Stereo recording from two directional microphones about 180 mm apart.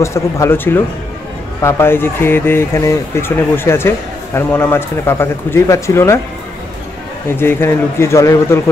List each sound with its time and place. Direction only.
0.0 s speech: 15° left (ahead or behind)
7.2 s speech: 10° left (ahead or behind)